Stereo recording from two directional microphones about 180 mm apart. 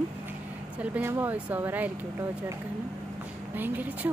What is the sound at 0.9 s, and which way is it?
Speech, 10° right (ahead or behind).